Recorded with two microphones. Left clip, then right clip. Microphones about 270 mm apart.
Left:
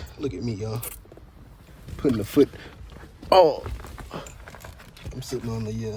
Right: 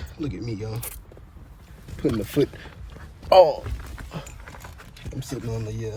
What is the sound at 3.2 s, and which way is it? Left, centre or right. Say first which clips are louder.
Speech: right 2 dB; left.